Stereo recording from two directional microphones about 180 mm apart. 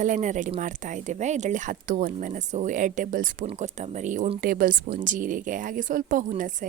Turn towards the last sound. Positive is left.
turn(degrees=-45)  # may be behind; listen again after turning